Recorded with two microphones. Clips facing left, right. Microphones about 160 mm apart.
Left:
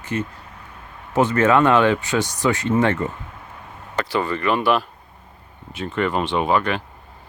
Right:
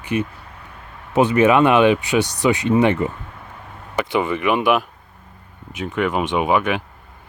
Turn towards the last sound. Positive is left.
turn(degrees=-10)  # may be behind; listen again after turning